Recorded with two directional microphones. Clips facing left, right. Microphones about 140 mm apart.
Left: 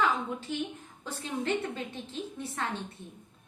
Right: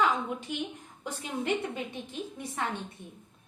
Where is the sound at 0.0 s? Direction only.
15° right (ahead or behind).